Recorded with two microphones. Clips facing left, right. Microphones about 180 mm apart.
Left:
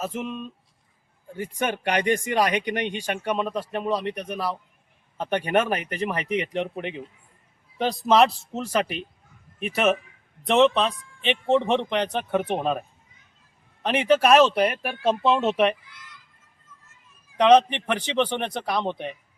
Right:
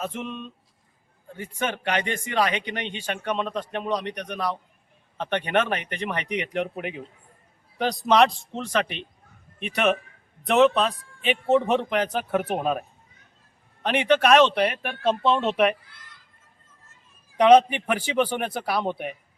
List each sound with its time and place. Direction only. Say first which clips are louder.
0.0 s a man's voice: left 2 dB; 5° left (ahead or behind)
2.6 s speech: left 5 dB; 45° left (ahead or behind)
3.0 s speech: left 2 dB; 10° left (ahead or behind)
13.8 s speech: left 1 dB; centre (ahead or behind)
15.8 s a sound: left 3 dB; 55° right (ahead or behind)
17.3 s a man's voice: right 1 dB; 10° right (ahead or behind)